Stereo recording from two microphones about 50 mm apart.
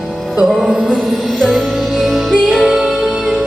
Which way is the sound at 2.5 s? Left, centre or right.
Centre.